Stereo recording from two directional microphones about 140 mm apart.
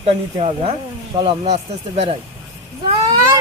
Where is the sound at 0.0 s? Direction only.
45° right (ahead or behind).